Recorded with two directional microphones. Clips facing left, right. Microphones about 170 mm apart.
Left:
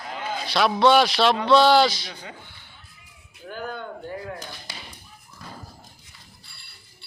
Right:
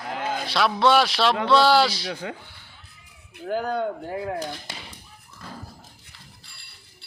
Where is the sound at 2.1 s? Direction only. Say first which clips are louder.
Right 8 dB; 65° right (ahead or behind).